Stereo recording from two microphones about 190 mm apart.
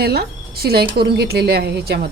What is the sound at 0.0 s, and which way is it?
A woman's voice, 55° right (ahead or behind).